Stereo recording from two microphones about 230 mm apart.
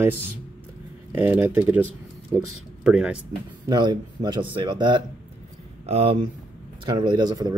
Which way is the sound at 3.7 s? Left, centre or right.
Centre.